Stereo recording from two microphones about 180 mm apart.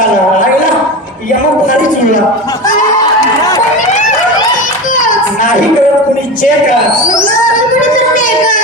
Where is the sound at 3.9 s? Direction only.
40° left (ahead or behind).